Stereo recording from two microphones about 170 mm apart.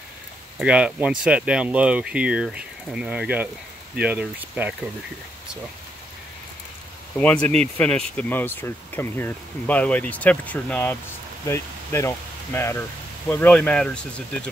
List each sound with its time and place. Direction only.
0.6 s speech: 5° right (ahead or behind)
7.2 s speech: 10° left (ahead or behind)